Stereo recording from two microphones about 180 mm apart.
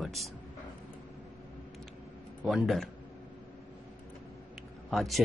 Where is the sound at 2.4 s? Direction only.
Centre (ahead or behind).